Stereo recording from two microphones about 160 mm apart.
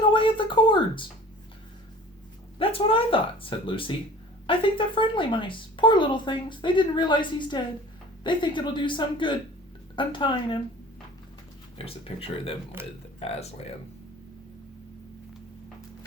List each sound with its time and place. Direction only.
0.1 s a sound: 30° left (ahead or behind)
2.6 s speech: 35° left (ahead or behind)
11.8 s speech: 35° left (ahead or behind)
12.8 s speech: 15° right (ahead or behind)
13.1 s speech: 40° left (ahead or behind)